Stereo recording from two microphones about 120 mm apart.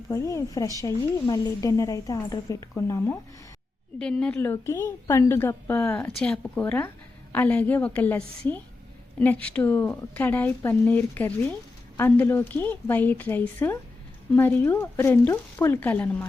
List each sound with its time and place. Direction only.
0.1 s a woman's voice: 25° left (ahead or behind)
3.9 s a woman's voice: 10° left (ahead or behind)
4.4 s a woman's voice: 20° left (ahead or behind)
6.1 s a woman's voice: 5° left (ahead or behind)